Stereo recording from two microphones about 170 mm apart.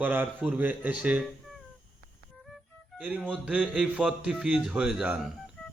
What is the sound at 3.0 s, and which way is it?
Speech, 10° right (ahead or behind).